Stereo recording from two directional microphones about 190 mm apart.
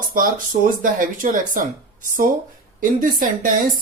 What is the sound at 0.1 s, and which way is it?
Speech, 45° right (ahead or behind).